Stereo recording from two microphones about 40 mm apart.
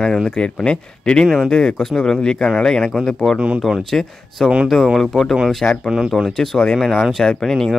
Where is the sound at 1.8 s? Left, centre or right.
Centre.